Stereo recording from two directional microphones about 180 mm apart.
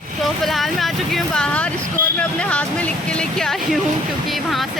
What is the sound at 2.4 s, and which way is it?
Speech, 5° left (ahead or behind).